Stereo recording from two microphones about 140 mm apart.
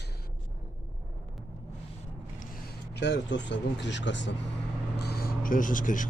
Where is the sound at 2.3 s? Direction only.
85° left.